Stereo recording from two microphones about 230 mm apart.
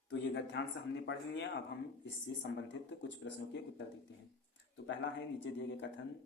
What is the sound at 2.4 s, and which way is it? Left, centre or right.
Speech, left.